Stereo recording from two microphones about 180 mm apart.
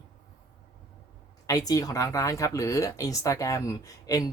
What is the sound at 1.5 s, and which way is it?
Speech, 20° left (ahead or behind).